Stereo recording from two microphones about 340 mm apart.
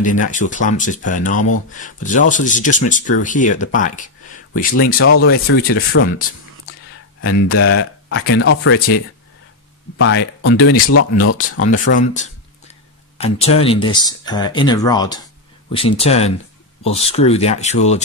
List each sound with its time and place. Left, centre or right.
0.0 s speech: left
4.9 s speech: left
9.9 s speech: left
11.8 s a sound: left
13.2 s speech: centre